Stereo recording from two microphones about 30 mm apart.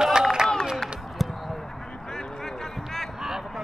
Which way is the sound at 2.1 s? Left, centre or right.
Left.